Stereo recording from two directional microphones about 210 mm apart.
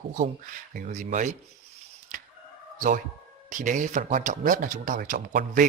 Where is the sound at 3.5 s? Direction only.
35° right (ahead or behind).